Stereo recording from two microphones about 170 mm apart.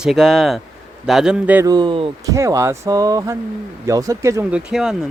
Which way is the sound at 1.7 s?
25° right (ahead or behind).